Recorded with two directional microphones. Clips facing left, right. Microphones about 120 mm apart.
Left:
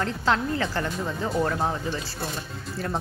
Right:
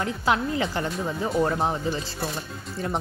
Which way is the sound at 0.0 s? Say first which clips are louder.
Even; 10° right (ahead or behind).